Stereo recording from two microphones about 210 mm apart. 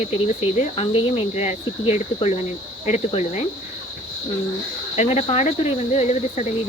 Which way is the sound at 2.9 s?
30° left (ahead or behind).